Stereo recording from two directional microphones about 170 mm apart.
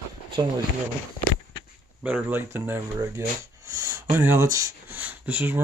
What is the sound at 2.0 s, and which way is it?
Speech, 10° right (ahead or behind).